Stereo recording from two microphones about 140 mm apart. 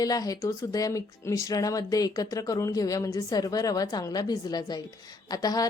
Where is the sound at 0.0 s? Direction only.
25° left (ahead or behind).